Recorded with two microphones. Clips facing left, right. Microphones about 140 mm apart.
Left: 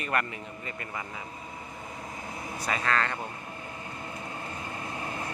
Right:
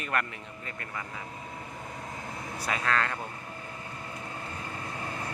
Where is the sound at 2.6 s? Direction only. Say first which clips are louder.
Left 1 dB; centre (ahead or behind).